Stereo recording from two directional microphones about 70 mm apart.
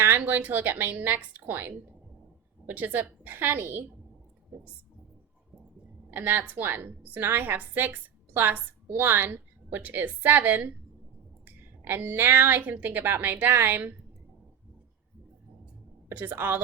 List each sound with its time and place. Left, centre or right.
0.2 s a woman's voice: right
6.1 s a woman's voice: right
16.1 s a woman's voice: right